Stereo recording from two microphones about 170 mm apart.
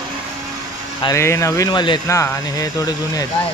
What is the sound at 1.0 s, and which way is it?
Speech, 15° left (ahead or behind).